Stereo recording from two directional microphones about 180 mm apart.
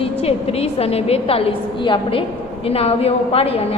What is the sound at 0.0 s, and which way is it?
A woman's voice, 35° left (ahead or behind).